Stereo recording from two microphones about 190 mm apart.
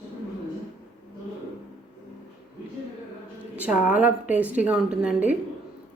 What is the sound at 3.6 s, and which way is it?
Speech, 5° right (ahead or behind).